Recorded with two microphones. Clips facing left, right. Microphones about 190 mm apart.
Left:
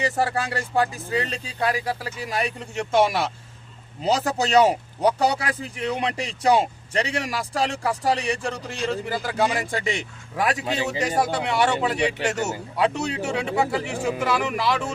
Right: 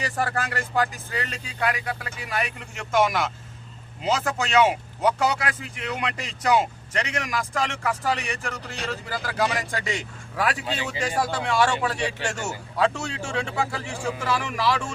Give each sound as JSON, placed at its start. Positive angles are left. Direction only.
{"t": 0.0, "sound": "speech", "side_deg": 25}